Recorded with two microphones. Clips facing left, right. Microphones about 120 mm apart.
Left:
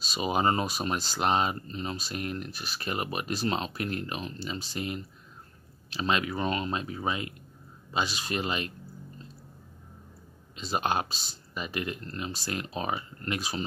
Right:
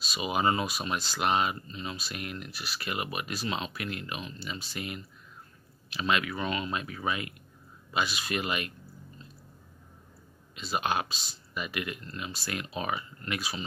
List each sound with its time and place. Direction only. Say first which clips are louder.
0.0 s speech: left 2 dB; 35° left (ahead or behind)
10.5 s speech: left 1 dB; 30° left (ahead or behind)